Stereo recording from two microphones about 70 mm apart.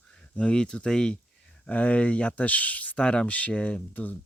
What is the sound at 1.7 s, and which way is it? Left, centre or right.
Speech, left.